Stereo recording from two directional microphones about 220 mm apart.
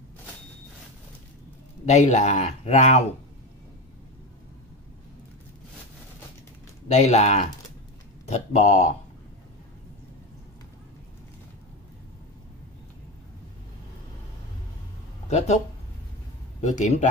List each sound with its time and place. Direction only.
1.9 s speech: 30° left (ahead or behind)
6.9 s speech: 30° left (ahead or behind)
15.2 s speech: 30° left (ahead or behind)
16.6 s speech: 30° left (ahead or behind)